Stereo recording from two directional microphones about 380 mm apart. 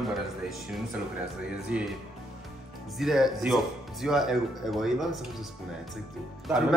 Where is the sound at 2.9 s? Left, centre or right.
Centre.